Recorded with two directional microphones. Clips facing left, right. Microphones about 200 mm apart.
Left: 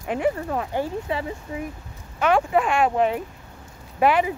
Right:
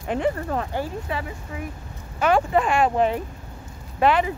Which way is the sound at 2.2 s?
Centre (ahead or behind).